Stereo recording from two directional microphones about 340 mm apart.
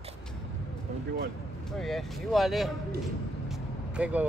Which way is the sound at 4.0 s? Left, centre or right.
Centre.